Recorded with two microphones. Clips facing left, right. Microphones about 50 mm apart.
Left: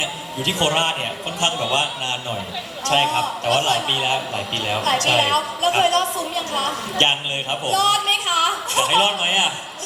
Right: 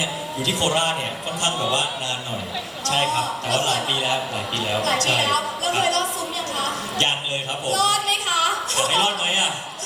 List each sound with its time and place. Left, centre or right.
0.4 s a man's voice: left
2.8 s a man's voice: left